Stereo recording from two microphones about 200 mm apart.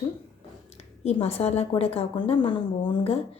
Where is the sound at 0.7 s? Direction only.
30° left (ahead or behind).